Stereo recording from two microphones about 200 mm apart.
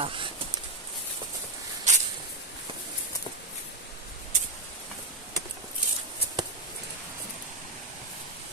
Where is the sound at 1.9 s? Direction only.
35° right (ahead or behind).